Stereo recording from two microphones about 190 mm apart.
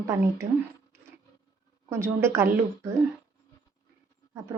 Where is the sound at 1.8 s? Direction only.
15° right (ahead or behind).